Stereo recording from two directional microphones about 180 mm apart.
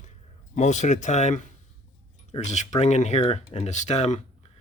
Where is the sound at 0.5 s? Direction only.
40° left (ahead or behind).